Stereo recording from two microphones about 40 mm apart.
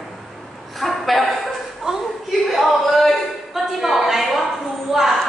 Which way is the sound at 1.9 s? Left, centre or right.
Centre.